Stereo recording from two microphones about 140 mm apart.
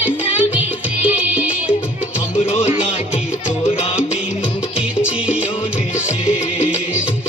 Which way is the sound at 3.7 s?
40° left (ahead or behind).